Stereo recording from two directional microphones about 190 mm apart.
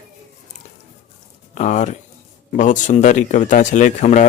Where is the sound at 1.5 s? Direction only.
40° left (ahead or behind).